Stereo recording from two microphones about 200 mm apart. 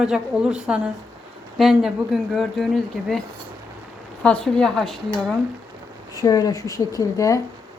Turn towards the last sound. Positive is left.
turn(degrees=15)  # may be behind; listen again after turning